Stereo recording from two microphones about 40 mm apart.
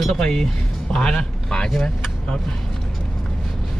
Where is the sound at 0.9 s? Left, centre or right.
Centre.